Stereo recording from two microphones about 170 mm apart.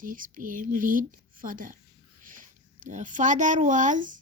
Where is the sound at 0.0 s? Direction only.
50° right (ahead or behind).